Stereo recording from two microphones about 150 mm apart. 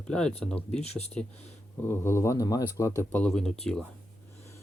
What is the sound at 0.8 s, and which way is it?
Speech, 45° left (ahead or behind).